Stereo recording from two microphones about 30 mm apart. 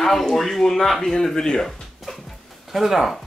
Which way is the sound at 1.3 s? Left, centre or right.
Left.